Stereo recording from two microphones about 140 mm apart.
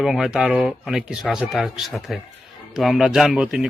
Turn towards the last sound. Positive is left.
turn(degrees=-5)  # may be behind; listen again after turning